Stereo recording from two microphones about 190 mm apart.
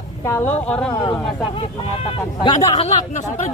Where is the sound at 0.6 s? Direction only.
5° left (ahead or behind).